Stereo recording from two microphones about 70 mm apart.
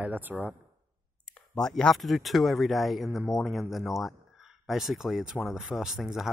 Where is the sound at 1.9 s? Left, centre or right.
Centre.